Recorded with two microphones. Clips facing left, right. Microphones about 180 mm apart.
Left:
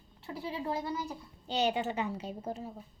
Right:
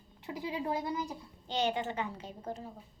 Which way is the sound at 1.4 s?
10° left (ahead or behind).